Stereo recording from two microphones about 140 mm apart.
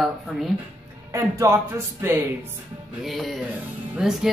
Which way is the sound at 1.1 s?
20° right (ahead or behind).